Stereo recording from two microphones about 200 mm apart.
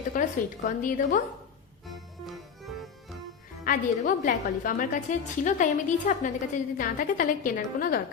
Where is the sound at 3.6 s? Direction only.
40° left (ahead or behind).